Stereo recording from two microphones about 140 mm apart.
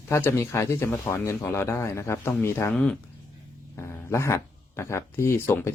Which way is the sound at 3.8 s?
20° left (ahead or behind).